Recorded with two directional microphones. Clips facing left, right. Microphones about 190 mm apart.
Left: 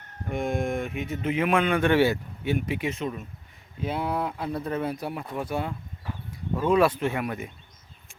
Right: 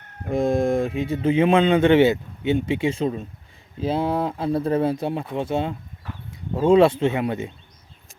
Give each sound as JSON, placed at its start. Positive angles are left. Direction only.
{"t": 0.3, "sound": "speech", "side_deg": -35}